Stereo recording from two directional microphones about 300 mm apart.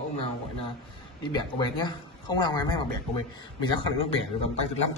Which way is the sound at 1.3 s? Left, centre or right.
Centre.